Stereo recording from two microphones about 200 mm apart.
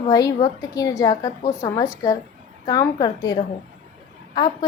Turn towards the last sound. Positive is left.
turn(degrees=20)  # may be behind; listen again after turning